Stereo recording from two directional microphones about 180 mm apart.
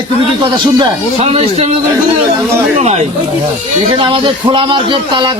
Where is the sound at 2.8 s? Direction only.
35° right (ahead or behind).